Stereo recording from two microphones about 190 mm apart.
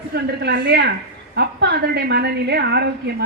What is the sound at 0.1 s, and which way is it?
A woman's voice, 60° right (ahead or behind).